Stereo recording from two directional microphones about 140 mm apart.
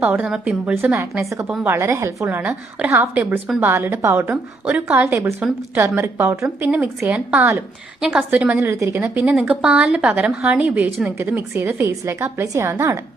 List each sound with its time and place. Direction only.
0.0 s a woman's voice: 10° right (ahead or behind)